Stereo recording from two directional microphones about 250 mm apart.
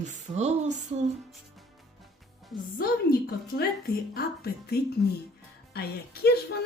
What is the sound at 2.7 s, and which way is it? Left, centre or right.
A woman's voice, left.